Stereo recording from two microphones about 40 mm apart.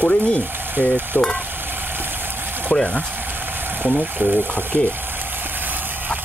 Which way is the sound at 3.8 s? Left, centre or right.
Right.